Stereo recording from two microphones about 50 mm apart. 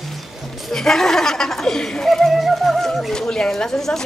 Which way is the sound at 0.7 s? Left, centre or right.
Centre.